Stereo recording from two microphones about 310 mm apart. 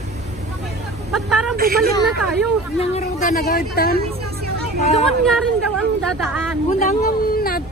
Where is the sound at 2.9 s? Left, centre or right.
Left.